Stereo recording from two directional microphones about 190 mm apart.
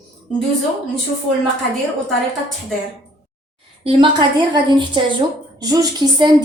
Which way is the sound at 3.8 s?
30° right (ahead or behind).